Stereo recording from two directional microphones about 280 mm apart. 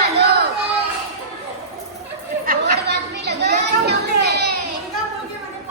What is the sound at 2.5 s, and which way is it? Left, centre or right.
Chatter, right.